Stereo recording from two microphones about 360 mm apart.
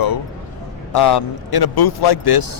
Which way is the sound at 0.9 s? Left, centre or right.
Left.